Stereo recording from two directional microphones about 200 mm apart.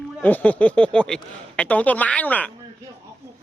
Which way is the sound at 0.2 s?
10° left (ahead or behind).